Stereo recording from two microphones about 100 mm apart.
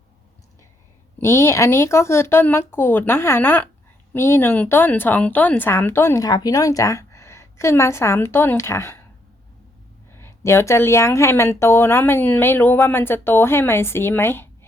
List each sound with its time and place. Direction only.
1.2 s speech: 30° left (ahead or behind)
6.2 s a woman's voice: 40° left (ahead or behind)
10.1 s speech: 25° left (ahead or behind)